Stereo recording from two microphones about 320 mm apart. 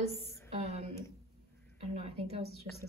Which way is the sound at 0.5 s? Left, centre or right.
Centre.